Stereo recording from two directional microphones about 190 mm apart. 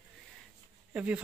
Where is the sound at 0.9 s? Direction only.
5° right (ahead or behind).